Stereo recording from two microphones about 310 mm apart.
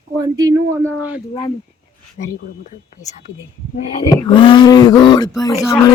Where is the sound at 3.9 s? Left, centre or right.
Centre.